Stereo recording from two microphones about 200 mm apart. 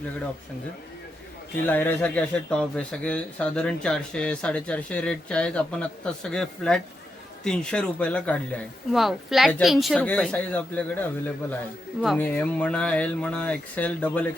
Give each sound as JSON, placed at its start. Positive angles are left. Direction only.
{"t": 1.6, "sound": "speech", "side_deg": 10}